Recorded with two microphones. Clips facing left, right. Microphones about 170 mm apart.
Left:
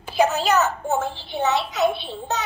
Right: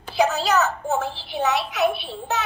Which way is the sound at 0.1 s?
15° left (ahead or behind).